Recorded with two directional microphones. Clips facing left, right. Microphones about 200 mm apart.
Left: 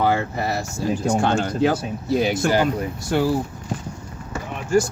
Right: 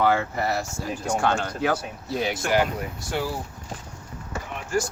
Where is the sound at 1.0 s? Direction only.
25° left (ahead or behind).